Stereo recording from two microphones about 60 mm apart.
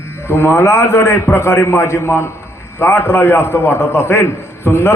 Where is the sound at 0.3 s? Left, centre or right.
Left.